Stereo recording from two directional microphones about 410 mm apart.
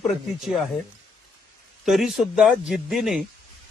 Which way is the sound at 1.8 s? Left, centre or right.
Centre.